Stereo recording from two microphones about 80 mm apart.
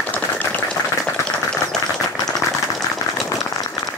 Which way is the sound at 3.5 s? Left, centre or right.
Left.